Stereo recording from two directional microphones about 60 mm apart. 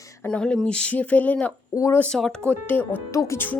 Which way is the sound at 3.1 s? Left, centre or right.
Left.